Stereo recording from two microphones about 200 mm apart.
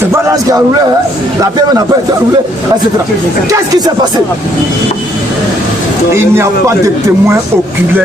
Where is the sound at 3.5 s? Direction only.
20° right (ahead or behind).